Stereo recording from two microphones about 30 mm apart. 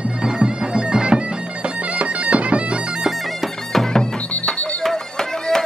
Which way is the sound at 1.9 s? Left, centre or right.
Right.